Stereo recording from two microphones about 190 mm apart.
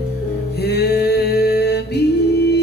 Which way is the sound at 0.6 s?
60° left (ahead or behind).